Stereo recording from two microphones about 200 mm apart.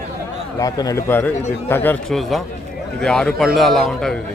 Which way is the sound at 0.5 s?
20° left (ahead or behind).